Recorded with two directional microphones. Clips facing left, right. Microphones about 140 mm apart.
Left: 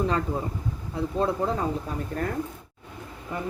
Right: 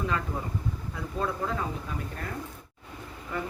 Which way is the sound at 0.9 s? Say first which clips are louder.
Left 7 dB; 30° left (ahead or behind).